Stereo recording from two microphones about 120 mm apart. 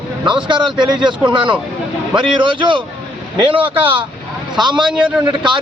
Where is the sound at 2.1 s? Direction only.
40° right (ahead or behind).